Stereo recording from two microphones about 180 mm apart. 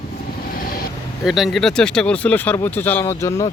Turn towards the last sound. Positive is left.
turn(degrees=15)  # may be behind; listen again after turning